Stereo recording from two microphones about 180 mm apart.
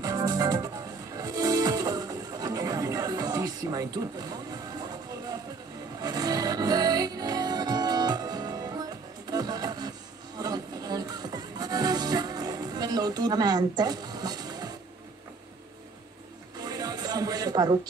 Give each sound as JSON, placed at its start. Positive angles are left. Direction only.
{"t": 0.0, "sound": "music", "side_deg": -20}
{"t": 16.5, "sound": "music", "side_deg": -20}